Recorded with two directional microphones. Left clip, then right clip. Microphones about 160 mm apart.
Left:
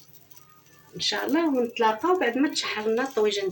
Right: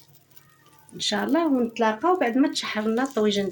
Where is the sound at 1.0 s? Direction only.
90° right.